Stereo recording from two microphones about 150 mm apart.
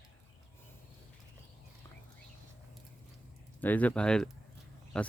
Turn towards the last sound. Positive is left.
turn(degrees=5)  # may be behind; listen again after turning